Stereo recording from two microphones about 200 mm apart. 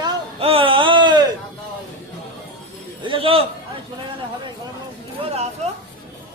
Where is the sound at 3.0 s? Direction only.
25° right (ahead or behind).